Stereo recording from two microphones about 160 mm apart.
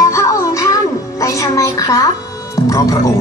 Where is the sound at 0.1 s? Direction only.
20° left (ahead or behind).